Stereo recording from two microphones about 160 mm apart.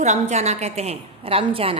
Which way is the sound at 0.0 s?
45° right (ahead or behind).